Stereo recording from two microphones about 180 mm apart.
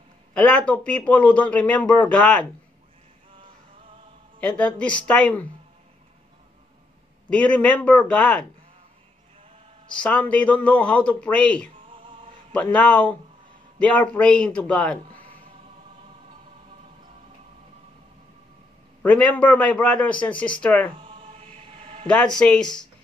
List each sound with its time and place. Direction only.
0.3 s a man's voice: 5° left (ahead or behind)
4.4 s a man's voice: 5° left (ahead or behind)
7.2 s a man's voice: 5° left (ahead or behind)
9.9 s a man's voice: 5° left (ahead or behind)
19.0 s a man's voice: 5° left (ahead or behind)
21.0 s chant: 30° right (ahead or behind)
22.0 s speech: 5° left (ahead or behind)